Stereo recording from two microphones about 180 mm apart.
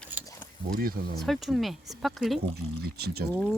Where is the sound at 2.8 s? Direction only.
60° right (ahead or behind).